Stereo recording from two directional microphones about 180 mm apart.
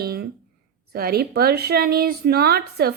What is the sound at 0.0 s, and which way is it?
Speech, 60° right (ahead or behind).